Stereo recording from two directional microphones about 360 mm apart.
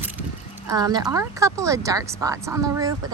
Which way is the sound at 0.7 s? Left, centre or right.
Centre.